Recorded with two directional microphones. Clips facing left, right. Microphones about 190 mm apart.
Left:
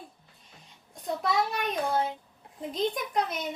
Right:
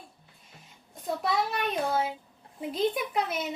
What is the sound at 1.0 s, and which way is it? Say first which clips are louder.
A woman's voice: even; centre (ahead or behind).